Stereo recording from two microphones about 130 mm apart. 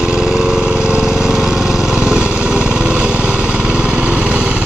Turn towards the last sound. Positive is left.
turn(degrees=-10)  # may be behind; listen again after turning